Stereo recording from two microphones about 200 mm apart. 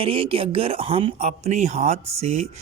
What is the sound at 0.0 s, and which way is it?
Speech, 25° right (ahead or behind).